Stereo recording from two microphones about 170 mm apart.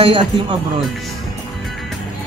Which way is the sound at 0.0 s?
30° right (ahead or behind).